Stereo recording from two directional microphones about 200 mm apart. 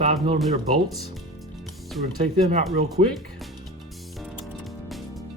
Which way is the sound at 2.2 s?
35° right (ahead or behind).